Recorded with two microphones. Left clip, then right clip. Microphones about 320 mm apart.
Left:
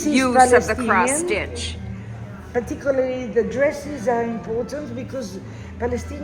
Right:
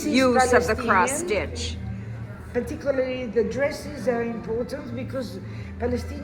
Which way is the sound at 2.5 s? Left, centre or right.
Left.